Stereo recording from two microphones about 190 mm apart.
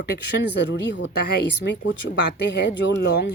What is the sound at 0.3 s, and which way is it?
Speech, 65° left (ahead or behind).